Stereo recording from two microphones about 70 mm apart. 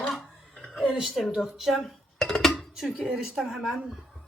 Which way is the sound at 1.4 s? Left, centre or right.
Centre.